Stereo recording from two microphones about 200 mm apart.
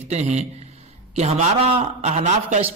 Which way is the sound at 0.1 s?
35° right (ahead or behind).